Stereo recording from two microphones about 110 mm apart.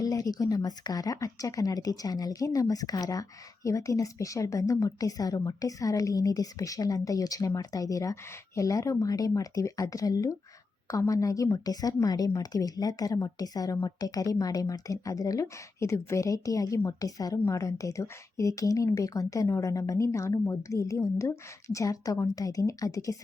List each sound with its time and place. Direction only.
0.0 s a woman's voice: 35° left (ahead or behind)